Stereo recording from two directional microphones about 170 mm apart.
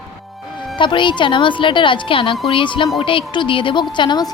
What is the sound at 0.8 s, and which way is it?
A woman's voice, 30° left (ahead or behind).